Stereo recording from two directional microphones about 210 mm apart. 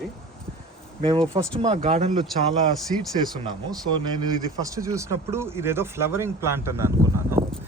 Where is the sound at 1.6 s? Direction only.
25° right (ahead or behind).